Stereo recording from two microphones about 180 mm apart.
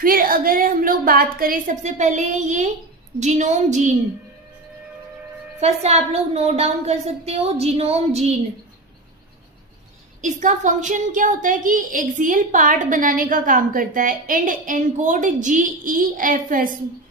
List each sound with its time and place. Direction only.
0.0 s a woman's voice: 50° right (ahead or behind)
5.5 s a woman's voice: 35° right (ahead or behind)
10.2 s a woman's voice: 45° right (ahead or behind)